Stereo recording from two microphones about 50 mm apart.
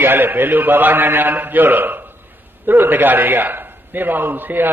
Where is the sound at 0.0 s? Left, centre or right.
Right.